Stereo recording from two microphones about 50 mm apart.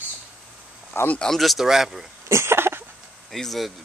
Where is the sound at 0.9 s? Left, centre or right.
Left.